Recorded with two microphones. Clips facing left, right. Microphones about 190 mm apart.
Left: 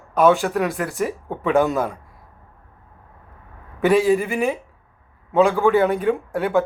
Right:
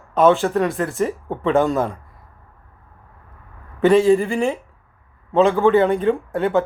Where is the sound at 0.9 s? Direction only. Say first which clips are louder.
Right 2 dB; 15° left (ahead or behind).